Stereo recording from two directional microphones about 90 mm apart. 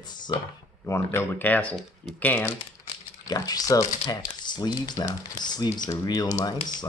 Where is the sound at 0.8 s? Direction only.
30° left (ahead or behind).